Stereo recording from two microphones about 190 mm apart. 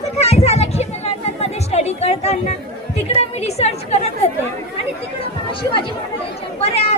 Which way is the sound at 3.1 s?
35° left (ahead or behind).